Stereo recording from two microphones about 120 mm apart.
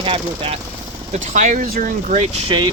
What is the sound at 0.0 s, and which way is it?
Speech, 50° right (ahead or behind).